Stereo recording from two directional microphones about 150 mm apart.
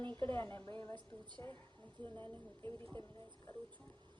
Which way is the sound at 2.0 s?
10° left (ahead or behind).